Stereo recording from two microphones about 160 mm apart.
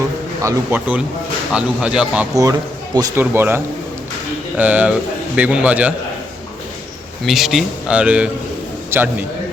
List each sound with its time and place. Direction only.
0.4 s a man's voice: 10° right (ahead or behind)
2.3 s a man's voice: 20° right (ahead or behind)
7.3 s a man's voice: centre (ahead or behind)